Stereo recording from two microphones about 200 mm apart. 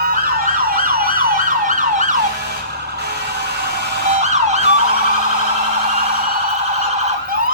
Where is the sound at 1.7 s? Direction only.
40° right (ahead or behind).